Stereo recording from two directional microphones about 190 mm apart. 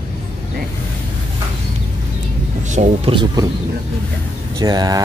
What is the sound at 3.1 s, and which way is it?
Speech, 25° right (ahead or behind).